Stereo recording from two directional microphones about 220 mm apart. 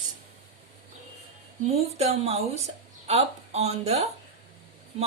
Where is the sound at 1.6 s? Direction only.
30° right (ahead or behind).